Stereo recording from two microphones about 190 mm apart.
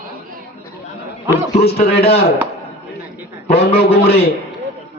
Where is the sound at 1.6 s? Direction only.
55° left (ahead or behind).